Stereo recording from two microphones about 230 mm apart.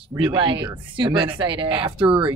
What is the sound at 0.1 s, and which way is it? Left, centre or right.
Speech, right.